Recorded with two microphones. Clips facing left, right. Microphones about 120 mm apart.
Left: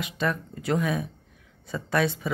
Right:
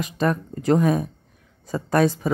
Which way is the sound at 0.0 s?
40° right (ahead or behind).